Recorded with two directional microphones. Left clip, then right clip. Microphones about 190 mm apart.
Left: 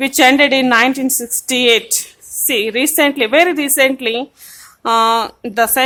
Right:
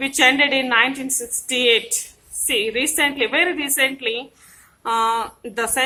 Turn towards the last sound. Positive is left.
turn(degrees=50)  # may be behind; listen again after turning